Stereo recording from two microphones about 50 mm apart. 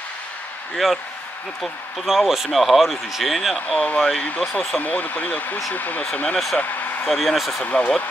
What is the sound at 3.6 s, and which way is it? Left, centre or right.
Speech, left.